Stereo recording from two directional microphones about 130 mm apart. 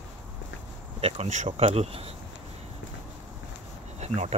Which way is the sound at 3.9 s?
55° right (ahead or behind).